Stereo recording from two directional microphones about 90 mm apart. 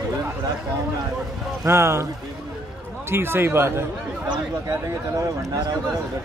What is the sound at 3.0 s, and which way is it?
Speech, 25° right (ahead or behind).